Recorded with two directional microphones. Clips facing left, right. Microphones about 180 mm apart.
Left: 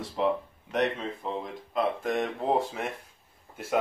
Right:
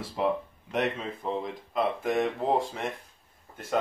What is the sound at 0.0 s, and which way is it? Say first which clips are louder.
Speech: left 1 dB; centre (ahead or behind).